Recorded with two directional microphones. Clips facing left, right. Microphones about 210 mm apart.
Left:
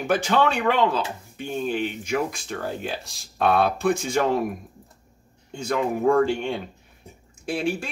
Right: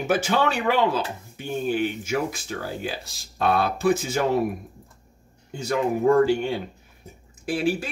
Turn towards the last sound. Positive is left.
turn(degrees=-5)  # may be behind; listen again after turning